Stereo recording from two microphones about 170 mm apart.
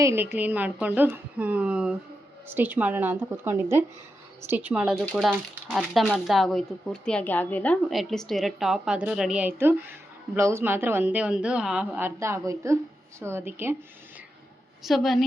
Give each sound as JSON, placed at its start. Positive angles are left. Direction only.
{"t": 0.0, "sound": "a woman's voice", "side_deg": -15}
{"t": 14.8, "sound": "speech", "side_deg": 0}